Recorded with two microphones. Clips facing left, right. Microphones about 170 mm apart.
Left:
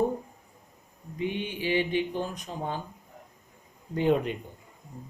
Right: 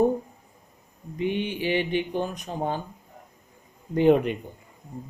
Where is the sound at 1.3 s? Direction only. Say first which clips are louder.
Right 3 dB; 65° right (ahead or behind).